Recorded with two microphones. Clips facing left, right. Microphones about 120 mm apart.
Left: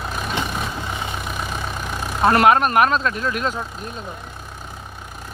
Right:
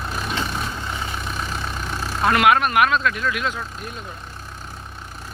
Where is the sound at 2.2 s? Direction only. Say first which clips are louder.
Left 2 dB; 35° left (ahead or behind).